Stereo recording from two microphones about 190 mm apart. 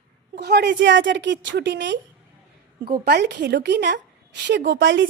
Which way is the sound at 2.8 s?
55° right (ahead or behind).